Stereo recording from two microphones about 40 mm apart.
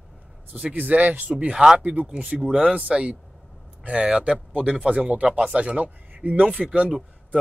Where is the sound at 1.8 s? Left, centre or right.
Right.